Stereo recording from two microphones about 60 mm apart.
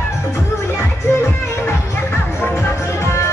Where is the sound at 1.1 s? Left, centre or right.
Left.